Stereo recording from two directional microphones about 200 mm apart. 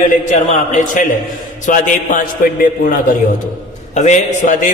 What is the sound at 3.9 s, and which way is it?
Speech, 35° left (ahead or behind).